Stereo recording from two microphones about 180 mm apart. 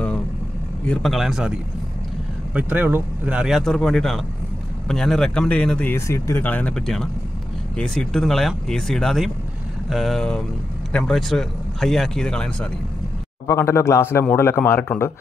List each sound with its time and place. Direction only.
0.8 s speech: centre (ahead or behind)
2.5 s a man's voice: 10° right (ahead or behind); by 15.1 s 10° left (ahead or behind)